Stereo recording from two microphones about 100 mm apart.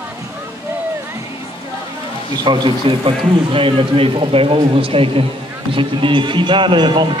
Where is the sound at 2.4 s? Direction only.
50° right (ahead or behind).